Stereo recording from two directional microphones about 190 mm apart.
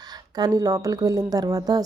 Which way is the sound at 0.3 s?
20° right (ahead or behind).